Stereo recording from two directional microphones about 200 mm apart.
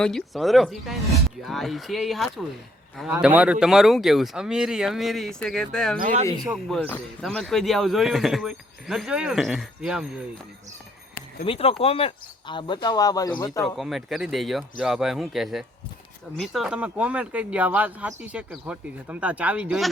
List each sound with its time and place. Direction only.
0.0 s a man's voice: centre (ahead or behind)
6.0 s speech: 40° right (ahead or behind)
6.4 s a man's voice: centre (ahead or behind)
11.4 s speech: 25° left (ahead or behind)
13.7 s a man's voice: centre (ahead or behind)